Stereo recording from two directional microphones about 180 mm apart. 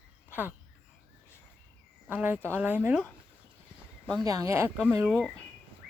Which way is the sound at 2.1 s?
10° right (ahead or behind).